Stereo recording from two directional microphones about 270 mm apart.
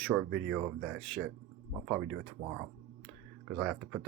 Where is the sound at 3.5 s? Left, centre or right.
Centre.